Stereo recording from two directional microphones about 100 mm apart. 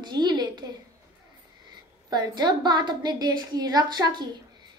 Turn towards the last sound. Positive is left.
turn(degrees=-45)  # may be behind; listen again after turning